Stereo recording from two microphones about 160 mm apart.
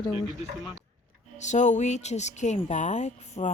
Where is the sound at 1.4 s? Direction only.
50° left (ahead or behind).